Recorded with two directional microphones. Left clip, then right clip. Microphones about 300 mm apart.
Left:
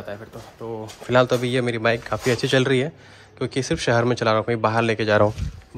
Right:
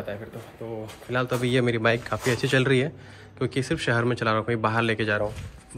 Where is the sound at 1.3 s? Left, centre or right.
Centre.